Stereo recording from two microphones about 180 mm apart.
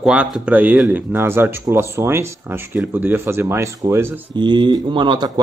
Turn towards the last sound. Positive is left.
turn(degrees=-25)  # may be behind; listen again after turning